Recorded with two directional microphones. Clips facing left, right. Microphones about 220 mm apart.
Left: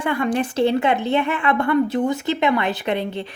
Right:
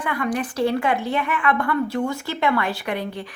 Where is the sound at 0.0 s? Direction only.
25° left (ahead or behind).